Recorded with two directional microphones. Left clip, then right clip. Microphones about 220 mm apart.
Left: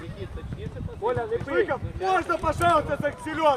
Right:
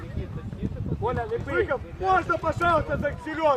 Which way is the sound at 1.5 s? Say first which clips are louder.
Even; 50° left (ahead or behind).